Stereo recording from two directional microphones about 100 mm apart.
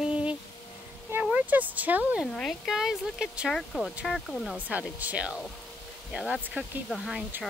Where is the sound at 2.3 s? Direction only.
5° left (ahead or behind).